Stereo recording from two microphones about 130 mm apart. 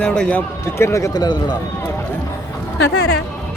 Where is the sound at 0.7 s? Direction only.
20° left (ahead or behind).